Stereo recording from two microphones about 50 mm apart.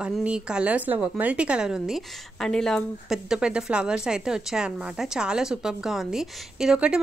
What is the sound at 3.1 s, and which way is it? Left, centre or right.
Speech, centre.